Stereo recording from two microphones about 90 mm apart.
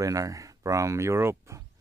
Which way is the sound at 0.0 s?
40° right (ahead or behind).